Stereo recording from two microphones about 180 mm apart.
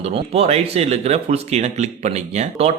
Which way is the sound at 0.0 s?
35° right (ahead or behind).